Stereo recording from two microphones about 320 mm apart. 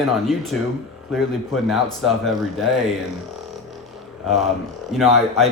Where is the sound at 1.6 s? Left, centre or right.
Centre.